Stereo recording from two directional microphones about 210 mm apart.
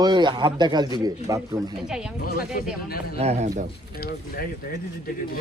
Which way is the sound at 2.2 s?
45° left (ahead or behind).